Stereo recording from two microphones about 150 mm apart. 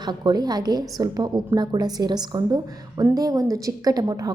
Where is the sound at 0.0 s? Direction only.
30° right (ahead or behind).